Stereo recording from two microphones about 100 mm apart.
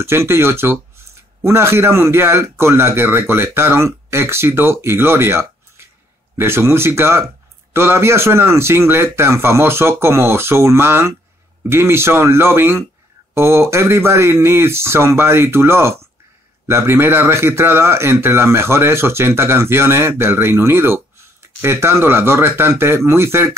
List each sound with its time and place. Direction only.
0.0 s a man's voice: 25° right (ahead or behind)